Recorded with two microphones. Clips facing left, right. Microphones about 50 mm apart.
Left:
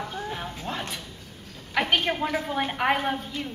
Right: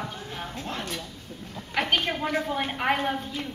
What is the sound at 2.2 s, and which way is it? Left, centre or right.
Speech, centre.